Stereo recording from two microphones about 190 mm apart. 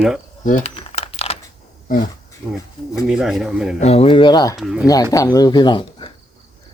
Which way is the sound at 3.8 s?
35° left (ahead or behind).